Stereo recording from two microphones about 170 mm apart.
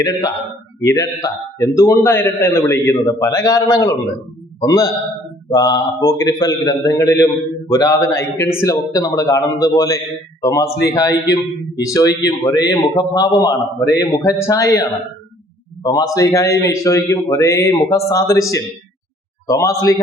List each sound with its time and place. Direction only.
0.0 s a man's voice: 20° left (ahead or behind)